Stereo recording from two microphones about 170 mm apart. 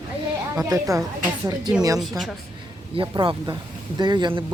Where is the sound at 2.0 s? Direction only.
Centre (ahead or behind).